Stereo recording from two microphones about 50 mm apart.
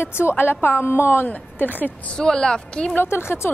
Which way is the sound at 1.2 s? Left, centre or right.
Left.